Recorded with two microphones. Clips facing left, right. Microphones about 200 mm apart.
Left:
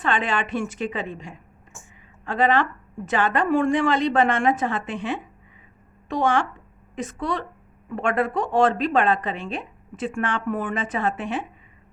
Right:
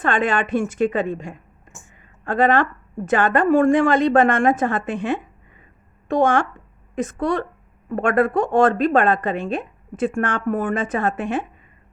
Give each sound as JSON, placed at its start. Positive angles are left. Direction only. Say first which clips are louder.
{"t": 0.0, "sound": "a woman's voice", "louder": "right 4 dB", "side_deg": -50}